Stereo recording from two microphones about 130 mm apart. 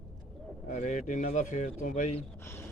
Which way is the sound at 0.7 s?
65° left (ahead or behind).